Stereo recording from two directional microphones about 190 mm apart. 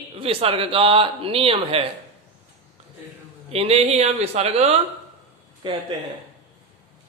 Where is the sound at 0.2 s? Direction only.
30° right (ahead or behind).